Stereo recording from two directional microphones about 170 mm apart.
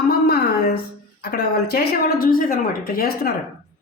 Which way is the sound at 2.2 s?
60° left (ahead or behind).